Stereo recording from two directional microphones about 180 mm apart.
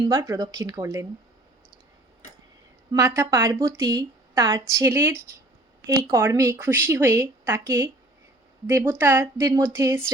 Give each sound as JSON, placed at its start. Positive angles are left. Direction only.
{"t": 0.0, "sound": "speech", "side_deg": -20}
{"t": 2.9, "sound": "a woman's voice", "side_deg": -20}